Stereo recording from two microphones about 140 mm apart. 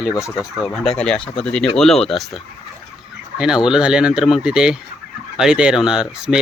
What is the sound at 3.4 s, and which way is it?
Speech, 5° right (ahead or behind).